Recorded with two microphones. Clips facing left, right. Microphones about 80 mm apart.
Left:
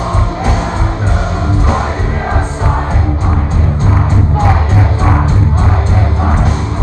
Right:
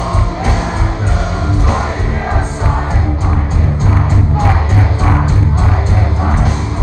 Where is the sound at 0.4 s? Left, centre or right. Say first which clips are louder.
Left 1 dB; left.